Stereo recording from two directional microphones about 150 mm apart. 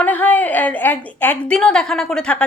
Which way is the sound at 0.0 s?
10° left (ahead or behind).